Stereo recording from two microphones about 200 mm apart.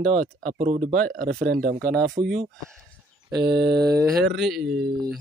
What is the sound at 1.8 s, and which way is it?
Speech, 5° left (ahead or behind).